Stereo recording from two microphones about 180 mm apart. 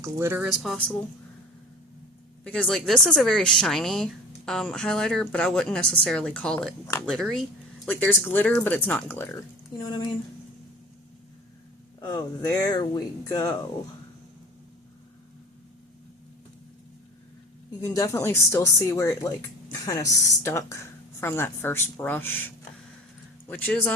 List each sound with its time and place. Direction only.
0.0 s speech: 15° right (ahead or behind)
2.4 s a woman's voice: 5° left (ahead or behind)
9.8 s speech: 25° left (ahead or behind)
11.9 s speech: 20° left (ahead or behind)
17.7 s a woman's voice: 20° left (ahead or behind)